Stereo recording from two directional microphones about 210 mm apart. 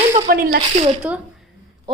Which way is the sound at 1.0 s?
5° right (ahead or behind).